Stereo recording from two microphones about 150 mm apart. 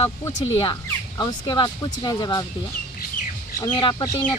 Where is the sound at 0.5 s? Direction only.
35° left (ahead or behind).